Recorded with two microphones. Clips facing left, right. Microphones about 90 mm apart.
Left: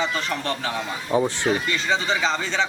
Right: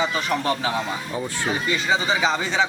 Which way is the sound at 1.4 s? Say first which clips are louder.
Even; 10° right (ahead or behind).